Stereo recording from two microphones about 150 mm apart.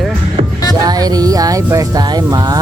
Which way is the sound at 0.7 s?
25° right (ahead or behind).